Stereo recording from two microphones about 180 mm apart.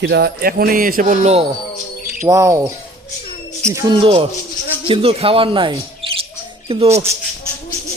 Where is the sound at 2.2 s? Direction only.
20° right (ahead or behind).